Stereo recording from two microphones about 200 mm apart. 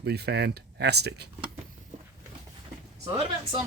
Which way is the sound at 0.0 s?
55° right (ahead or behind).